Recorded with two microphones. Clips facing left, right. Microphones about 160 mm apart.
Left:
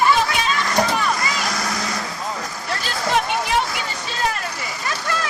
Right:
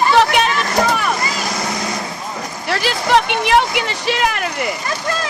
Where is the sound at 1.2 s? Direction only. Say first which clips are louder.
Right 2 dB; 25° right (ahead or behind).